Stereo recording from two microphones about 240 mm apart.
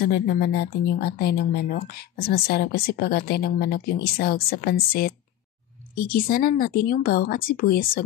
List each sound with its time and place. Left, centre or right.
0.0 s speech: left